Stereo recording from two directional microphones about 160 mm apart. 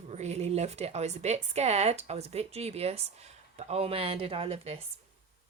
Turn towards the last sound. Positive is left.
turn(degrees=-40)  # may be behind; listen again after turning